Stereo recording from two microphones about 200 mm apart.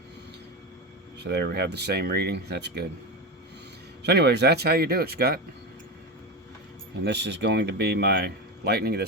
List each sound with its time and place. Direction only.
1.2 s speech: 55° right (ahead or behind)
4.0 s speech: 55° right (ahead or behind)
7.0 s speech: 60° right (ahead or behind)